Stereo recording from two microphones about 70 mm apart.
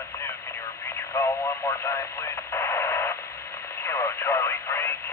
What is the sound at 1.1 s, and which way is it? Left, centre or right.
Radio, left.